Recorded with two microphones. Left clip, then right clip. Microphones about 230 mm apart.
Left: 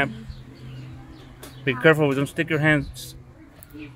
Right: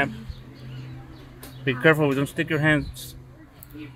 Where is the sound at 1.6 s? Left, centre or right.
Centre.